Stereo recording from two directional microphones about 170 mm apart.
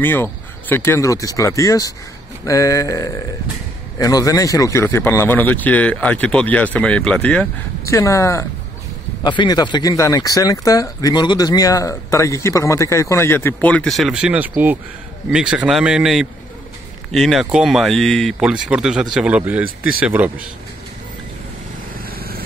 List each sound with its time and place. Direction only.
0.0 s speech: 10° left (ahead or behind); by 20.4 s 10° right (ahead or behind)